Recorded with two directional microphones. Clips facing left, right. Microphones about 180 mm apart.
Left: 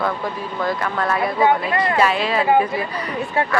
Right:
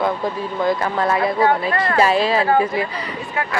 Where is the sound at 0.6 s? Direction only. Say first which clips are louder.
Right 3 dB; 20° right (ahead or behind).